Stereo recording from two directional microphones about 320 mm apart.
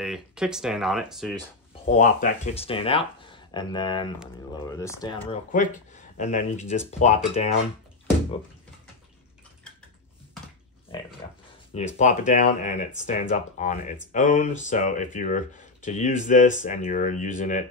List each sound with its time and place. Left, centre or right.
0.0 s speech: centre
1.9 s speech: left
11.2 s a sound: centre
11.7 s speech: left